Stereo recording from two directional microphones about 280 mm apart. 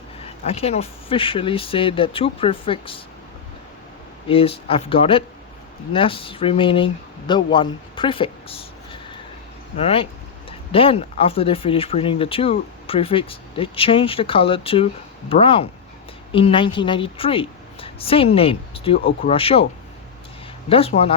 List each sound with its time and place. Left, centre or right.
0.2 s speech: left
4.3 s speech: centre
20.7 s speech: left